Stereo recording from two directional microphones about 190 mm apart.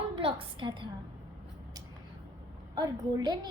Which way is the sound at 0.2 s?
30° right (ahead or behind).